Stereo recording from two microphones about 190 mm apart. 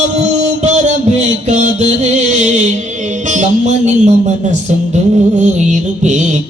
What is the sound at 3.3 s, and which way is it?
Music, 40° right (ahead or behind).